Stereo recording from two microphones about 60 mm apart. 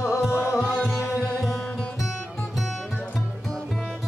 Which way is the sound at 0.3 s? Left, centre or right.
Left.